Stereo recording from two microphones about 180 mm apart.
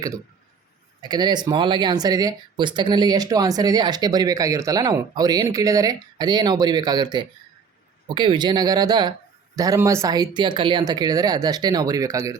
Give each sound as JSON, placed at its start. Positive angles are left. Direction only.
{"t": 1.0, "sound": "speech", "side_deg": -20}